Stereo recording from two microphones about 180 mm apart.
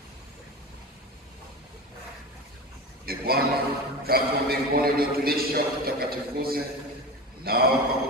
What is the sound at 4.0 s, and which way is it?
A man's voice, 55° right (ahead or behind).